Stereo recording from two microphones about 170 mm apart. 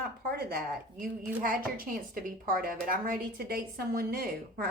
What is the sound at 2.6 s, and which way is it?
A woman's voice, 55° right (ahead or behind).